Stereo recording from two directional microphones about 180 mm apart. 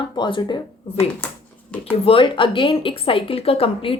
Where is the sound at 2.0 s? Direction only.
30° left (ahead or behind).